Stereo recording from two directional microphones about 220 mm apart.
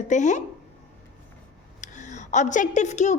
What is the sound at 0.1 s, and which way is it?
Speech, 35° left (ahead or behind).